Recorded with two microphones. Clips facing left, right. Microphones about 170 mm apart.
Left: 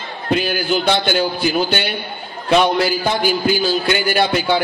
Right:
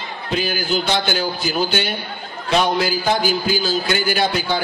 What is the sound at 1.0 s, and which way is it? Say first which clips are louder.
A man's voice: left 4 dB; 55° left (ahead or behind).